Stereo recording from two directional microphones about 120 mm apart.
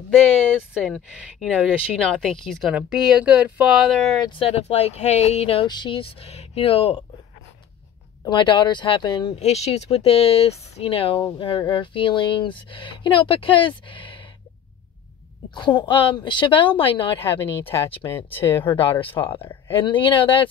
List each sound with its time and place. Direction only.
1.4 s speech: 5° left (ahead or behind)
4.4 s speech: 60° left (ahead or behind)
5.7 s speech: 40° left (ahead or behind)
8.2 s speech: 40° left (ahead or behind)
9.3 s speech: 60° left (ahead or behind); by 14.2 s 45° left (ahead or behind)
15.5 s speech: 40° left (ahead or behind)